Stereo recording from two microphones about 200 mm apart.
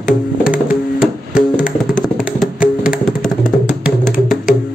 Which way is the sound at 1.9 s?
Centre (ahead or behind).